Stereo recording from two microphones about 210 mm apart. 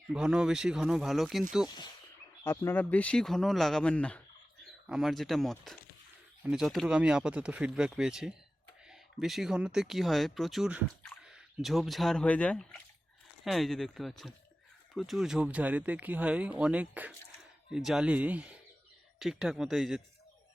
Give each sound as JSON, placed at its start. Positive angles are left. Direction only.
{"t": 0.1, "sound": "speech", "side_deg": -5}
{"t": 1.6, "sound": "speech", "side_deg": 20}